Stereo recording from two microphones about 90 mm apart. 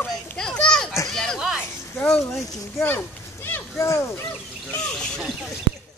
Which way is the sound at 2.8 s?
25° left (ahead or behind).